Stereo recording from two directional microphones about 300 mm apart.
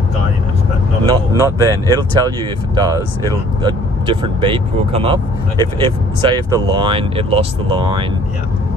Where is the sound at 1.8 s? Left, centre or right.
Centre.